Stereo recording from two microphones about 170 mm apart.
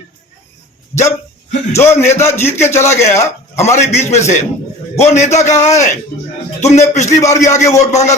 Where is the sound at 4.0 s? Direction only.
40° left (ahead or behind).